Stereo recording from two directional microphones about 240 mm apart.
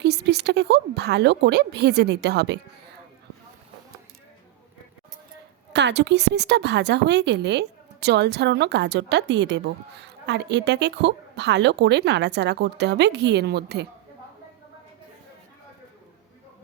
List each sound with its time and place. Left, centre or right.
0.0 s a woman's voice: right
5.7 s a woman's voice: right